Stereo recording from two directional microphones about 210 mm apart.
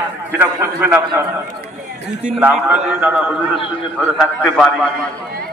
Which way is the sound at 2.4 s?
5° right (ahead or behind).